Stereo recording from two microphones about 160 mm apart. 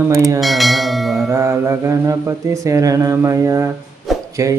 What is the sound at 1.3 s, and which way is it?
A man's voice, 15° right (ahead or behind).